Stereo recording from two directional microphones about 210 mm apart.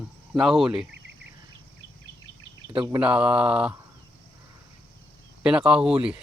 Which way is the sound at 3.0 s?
5° right (ahead or behind).